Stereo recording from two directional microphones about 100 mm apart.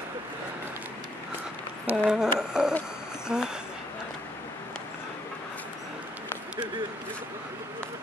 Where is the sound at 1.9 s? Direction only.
5° right (ahead or behind).